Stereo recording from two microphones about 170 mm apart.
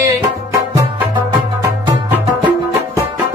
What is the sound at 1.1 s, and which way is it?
Music, 25° right (ahead or behind).